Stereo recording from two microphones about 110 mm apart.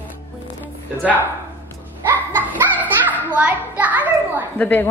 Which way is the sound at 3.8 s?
15° right (ahead or behind).